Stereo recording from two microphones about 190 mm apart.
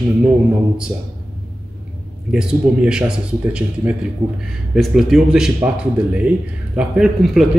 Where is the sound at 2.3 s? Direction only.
5° right (ahead or behind).